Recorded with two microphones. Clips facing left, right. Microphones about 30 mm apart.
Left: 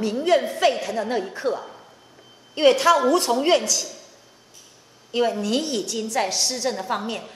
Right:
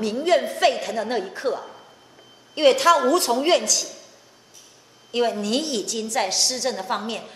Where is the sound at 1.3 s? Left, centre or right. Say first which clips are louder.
Even; right.